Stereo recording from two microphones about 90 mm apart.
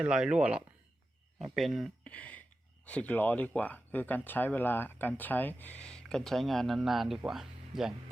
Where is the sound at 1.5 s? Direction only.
Centre (ahead or behind).